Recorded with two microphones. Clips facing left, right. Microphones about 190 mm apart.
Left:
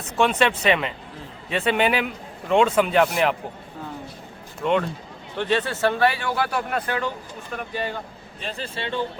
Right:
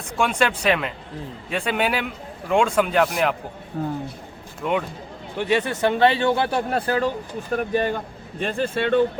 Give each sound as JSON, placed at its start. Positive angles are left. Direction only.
{"t": 0.2, "sound": "speech", "side_deg": 0}
{"t": 3.8, "sound": "speech", "side_deg": -60}
{"t": 4.6, "sound": "speech", "side_deg": -5}
{"t": 7.5, "sound": "speech", "side_deg": -50}